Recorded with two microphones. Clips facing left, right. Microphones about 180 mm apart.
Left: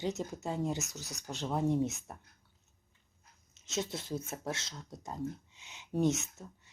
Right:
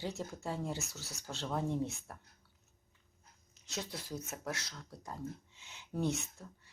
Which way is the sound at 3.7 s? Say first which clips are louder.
Left 6 dB; 25° left (ahead or behind).